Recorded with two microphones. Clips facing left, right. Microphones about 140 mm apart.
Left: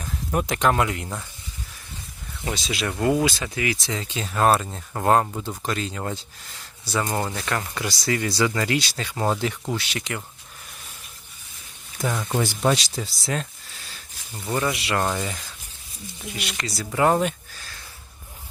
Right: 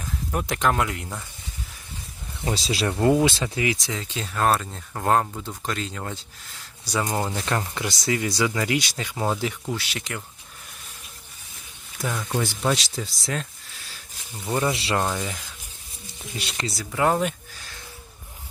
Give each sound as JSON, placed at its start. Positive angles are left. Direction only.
{"t": 0.3, "sound": "speech", "side_deg": 0}
{"t": 2.4, "sound": "speech", "side_deg": -30}
{"t": 3.9, "sound": "speech", "side_deg": 0}
{"t": 6.8, "sound": "speech", "side_deg": -15}
{"t": 7.3, "sound": "speech", "side_deg": -25}
{"t": 12.1, "sound": "speech", "side_deg": 15}
{"t": 12.5, "sound": "speech", "side_deg": 0}
{"t": 14.7, "sound": "speech", "side_deg": -30}
{"t": 15.0, "sound": "speech", "side_deg": 0}
{"t": 16.4, "sound": "speech", "side_deg": -30}
{"t": 16.7, "sound": "speech", "side_deg": 5}